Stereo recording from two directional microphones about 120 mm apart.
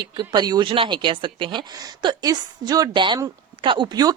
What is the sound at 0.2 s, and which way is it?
A woman's voice, 40° right (ahead or behind).